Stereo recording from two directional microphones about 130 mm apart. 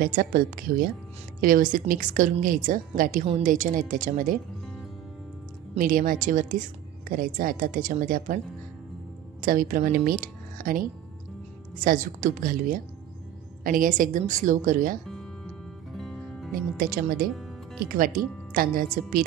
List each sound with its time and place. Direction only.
0.0 s a woman's voice: 90° right
5.8 s a woman's voice: 90° right
9.4 s a woman's voice: 90° right
15.0 s music: 5° left (ahead or behind)
17.9 s a woman's voice: 90° right